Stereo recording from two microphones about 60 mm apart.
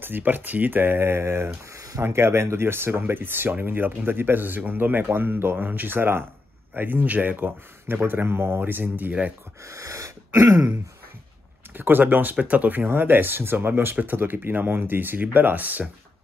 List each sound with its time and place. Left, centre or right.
0.0 s speech: right
1.8 s a sound: right
2.0 s speech: right
9.7 s throat clearing: right
11.7 s speech: right